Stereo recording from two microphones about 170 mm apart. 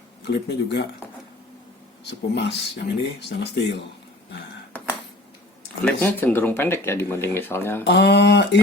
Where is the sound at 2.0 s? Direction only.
90° left.